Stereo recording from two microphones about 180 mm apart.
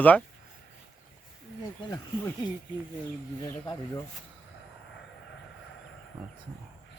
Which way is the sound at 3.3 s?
20° left (ahead or behind).